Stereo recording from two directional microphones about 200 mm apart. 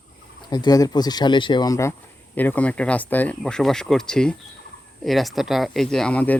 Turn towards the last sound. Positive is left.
turn(degrees=5)  # may be behind; listen again after turning